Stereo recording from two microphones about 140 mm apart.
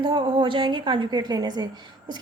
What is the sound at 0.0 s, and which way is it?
A woman's voice, 30° right (ahead or behind).